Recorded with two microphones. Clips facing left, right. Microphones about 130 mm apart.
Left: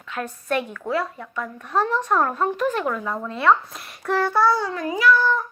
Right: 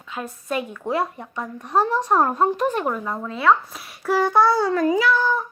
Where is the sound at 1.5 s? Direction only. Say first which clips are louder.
Right 2 dB; 15° right (ahead or behind).